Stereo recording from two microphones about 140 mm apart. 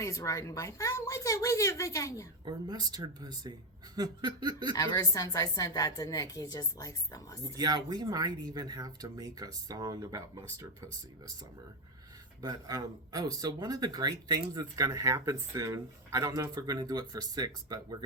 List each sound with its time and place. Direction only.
0.0 s a woman's voice: 20° left (ahead or behind)
2.4 s speech: 30° right (ahead or behind)
3.9 s a sound: 30° right (ahead or behind)
4.8 s a woman's voice: 25° left (ahead or behind)
7.4 s speech: 30° right (ahead or behind)
12.4 s speech: 30° right (ahead or behind)